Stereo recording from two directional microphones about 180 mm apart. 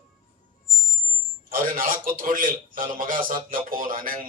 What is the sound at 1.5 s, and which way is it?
A man's voice, 50° right (ahead or behind).